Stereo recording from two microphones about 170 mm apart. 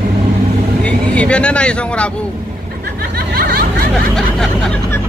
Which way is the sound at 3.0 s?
60° right (ahead or behind).